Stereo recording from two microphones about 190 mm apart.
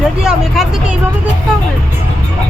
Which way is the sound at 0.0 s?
5° right (ahead or behind).